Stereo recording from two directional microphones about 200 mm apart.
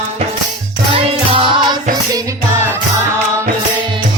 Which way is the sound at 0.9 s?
30° right (ahead or behind).